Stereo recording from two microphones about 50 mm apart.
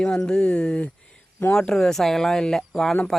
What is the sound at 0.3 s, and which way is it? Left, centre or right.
Speech, centre.